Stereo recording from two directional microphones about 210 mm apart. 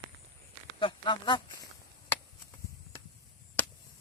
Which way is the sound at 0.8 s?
20° left (ahead or behind).